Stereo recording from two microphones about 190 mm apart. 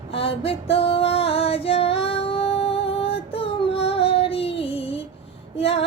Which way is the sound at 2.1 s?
30° left (ahead or behind).